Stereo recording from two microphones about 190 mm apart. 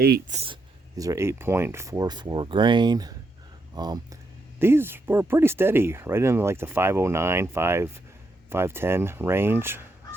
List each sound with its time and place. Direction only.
0.3 s speech: 30° right (ahead or behind)
0.9 s speech: 15° right (ahead or behind)
4.6 s speech: 10° right (ahead or behind)
8.4 s goose: 10° right (ahead or behind)